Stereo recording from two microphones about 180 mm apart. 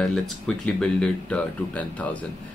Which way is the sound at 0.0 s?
5° left (ahead or behind).